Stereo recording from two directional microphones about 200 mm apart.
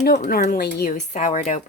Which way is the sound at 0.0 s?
50° left (ahead or behind).